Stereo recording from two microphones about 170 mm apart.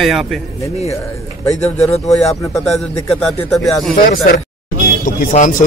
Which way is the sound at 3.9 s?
60° left (ahead or behind).